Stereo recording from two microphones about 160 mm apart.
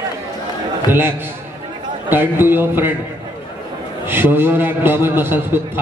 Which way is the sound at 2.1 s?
15° right (ahead or behind).